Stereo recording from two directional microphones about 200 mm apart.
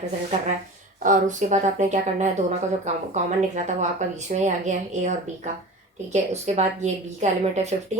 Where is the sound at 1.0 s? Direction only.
40° right (ahead or behind).